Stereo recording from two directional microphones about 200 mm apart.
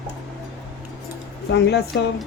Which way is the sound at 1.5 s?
55° left (ahead or behind).